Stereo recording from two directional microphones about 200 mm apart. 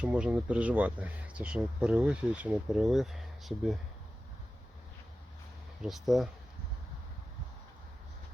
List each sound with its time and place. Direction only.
0.0 s speech: 5° right (ahead or behind)
5.8 s speech: centre (ahead or behind)